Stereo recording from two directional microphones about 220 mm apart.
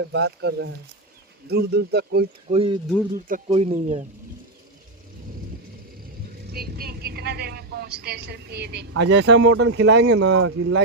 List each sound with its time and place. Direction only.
0.0 s speech: 50° right (ahead or behind)
2.5 s speech: 25° right (ahead or behind)
6.5 s a woman's voice: 45° right (ahead or behind); by 10.8 s 65° right (ahead or behind)